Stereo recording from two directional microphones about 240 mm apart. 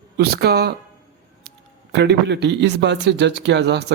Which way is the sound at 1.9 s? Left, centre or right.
Right.